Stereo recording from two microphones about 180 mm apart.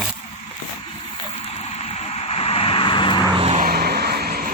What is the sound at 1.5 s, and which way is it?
Vehicle, 35° left (ahead or behind).